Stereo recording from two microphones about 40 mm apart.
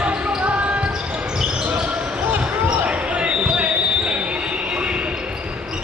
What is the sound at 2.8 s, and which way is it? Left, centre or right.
Basketball bounce, right.